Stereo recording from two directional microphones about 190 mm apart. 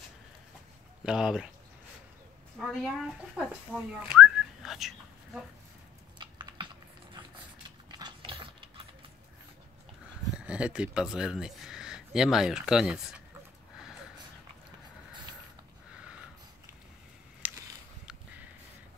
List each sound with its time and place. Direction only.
1.0 s speech: 5° right (ahead or behind)
2.6 s speech: centre (ahead or behind)
6.1 s typing: 25° right (ahead or behind)
8.0 s mechanisms: 25° right (ahead or behind)
10.3 s speech: 5° right (ahead or behind)
17.4 s a sound: 10° right (ahead or behind)